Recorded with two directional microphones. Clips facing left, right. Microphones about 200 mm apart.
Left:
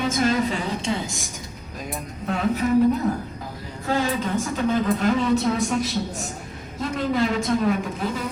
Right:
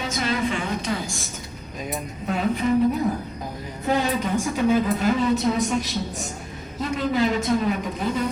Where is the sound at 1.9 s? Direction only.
Centre (ahead or behind).